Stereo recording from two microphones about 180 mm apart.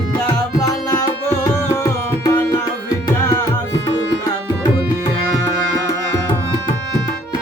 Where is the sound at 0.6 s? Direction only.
20° left (ahead or behind).